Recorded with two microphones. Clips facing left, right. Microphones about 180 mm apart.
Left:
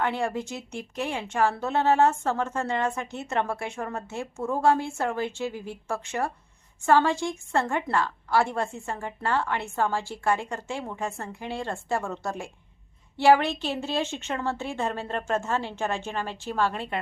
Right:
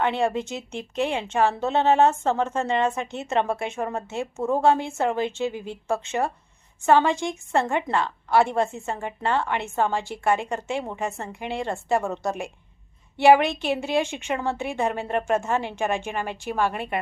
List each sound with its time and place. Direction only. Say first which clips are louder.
0.0 s a woman's voice: right 4 dB; 20° right (ahead or behind)